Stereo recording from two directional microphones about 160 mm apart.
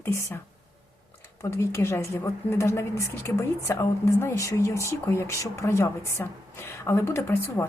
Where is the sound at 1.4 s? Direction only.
20° left (ahead or behind).